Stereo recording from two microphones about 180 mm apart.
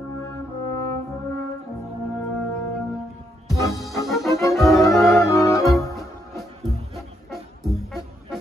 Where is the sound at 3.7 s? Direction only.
Centre (ahead or behind).